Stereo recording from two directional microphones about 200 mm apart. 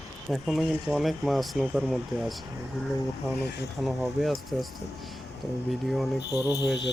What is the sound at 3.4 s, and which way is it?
Speech, 60° left (ahead or behind).